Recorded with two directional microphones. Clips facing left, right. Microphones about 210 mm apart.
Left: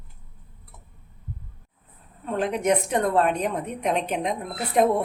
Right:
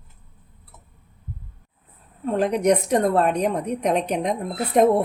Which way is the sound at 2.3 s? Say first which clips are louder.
Right 3 dB; 40° right (ahead or behind).